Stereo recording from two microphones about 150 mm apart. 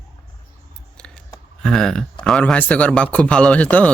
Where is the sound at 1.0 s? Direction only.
5° left (ahead or behind).